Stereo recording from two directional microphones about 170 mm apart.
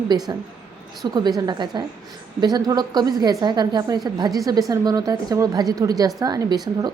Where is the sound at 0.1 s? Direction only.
25° right (ahead or behind).